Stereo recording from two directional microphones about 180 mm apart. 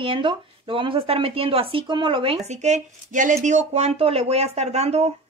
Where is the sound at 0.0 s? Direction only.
25° right (ahead or behind).